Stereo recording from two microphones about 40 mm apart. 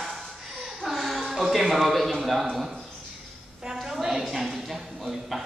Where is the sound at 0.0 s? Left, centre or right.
Centre.